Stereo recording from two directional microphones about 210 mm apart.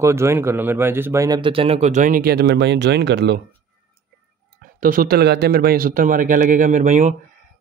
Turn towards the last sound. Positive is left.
turn(degrees=-35)  # may be behind; listen again after turning